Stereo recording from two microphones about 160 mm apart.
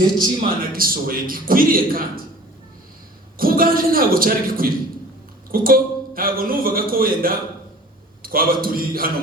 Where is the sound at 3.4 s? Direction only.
65° right (ahead or behind).